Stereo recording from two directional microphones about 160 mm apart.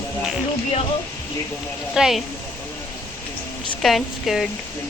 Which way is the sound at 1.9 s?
5° right (ahead or behind).